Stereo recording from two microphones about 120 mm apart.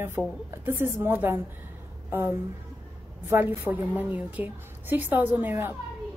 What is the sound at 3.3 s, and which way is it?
A woman's voice, 20° right (ahead or behind).